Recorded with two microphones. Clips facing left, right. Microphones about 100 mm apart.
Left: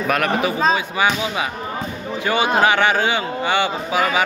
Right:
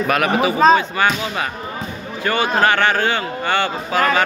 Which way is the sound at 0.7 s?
10° left (ahead or behind).